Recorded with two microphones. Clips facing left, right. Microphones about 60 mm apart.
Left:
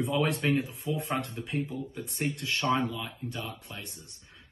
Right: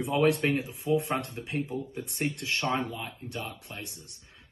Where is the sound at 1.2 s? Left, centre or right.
Right.